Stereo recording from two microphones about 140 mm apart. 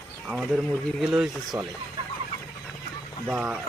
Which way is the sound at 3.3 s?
10° right (ahead or behind).